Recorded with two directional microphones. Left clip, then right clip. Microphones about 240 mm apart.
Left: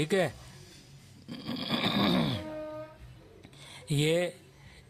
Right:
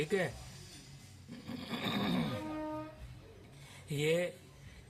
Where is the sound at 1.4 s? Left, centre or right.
Left.